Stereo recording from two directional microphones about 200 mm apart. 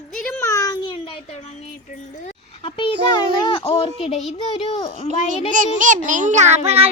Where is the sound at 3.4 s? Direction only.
25° left (ahead or behind).